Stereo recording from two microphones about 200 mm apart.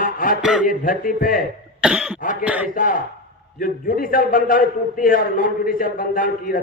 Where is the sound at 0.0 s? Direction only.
45° left (ahead or behind).